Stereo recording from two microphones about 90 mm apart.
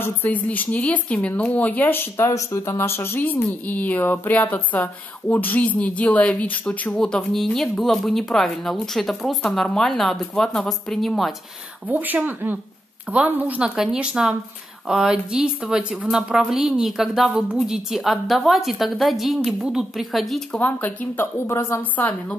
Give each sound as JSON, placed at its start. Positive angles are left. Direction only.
{"t": 0.0, "sound": "speech", "side_deg": 20}
{"t": 2.2, "sound": "speech", "side_deg": 40}
{"t": 7.0, "sound": "a woman's voice", "side_deg": 5}
{"t": 11.9, "sound": "a woman's voice", "side_deg": -20}
{"t": 20.5, "sound": "speech", "side_deg": 20}